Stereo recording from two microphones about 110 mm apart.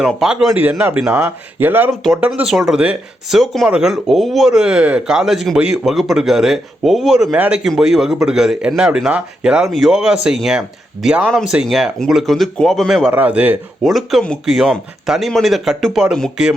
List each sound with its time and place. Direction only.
0.2 s speech: 5° right (ahead or behind)
2.0 s speech: 10° right (ahead or behind)
11.3 s speech: 5° left (ahead or behind)
13.1 s speech: 15° right (ahead or behind)
13.8 s speech: centre (ahead or behind)